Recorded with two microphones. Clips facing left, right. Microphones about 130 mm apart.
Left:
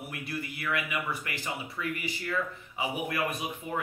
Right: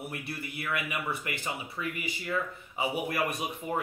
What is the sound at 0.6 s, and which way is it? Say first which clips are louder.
Speech: even; 20° right (ahead or behind).